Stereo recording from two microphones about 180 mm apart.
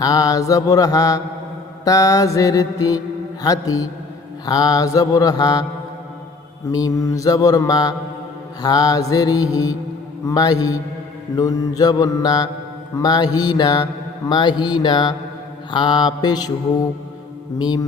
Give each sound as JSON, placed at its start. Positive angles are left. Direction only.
{"t": 0.0, "sound": "mantra", "side_deg": 20}
{"t": 6.7, "sound": "mantra", "side_deg": 20}
{"t": 17.6, "sound": "mantra", "side_deg": 25}